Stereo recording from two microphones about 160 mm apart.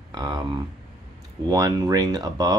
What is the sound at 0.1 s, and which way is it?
Speech, 25° right (ahead or behind).